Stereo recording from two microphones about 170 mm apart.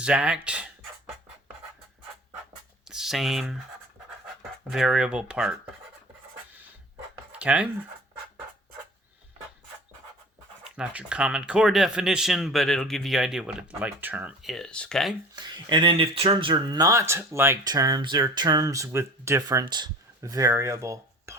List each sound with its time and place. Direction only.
0.0 s speech: 5° right (ahead or behind)
2.9 s speech: centre (ahead or behind)
4.7 s speech: centre (ahead or behind)
7.3 s speech: 10° right (ahead or behind)
10.6 s speech: 5° right (ahead or behind)
15.4 s speech: 25° right (ahead or behind)